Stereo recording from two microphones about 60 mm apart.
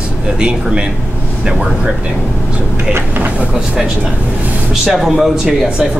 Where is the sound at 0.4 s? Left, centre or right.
Centre.